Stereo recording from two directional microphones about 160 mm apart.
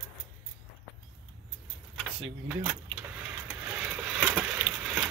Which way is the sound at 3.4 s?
10° right (ahead or behind).